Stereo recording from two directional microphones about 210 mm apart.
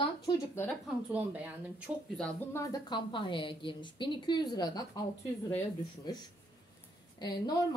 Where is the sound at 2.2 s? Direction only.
5° left (ahead or behind).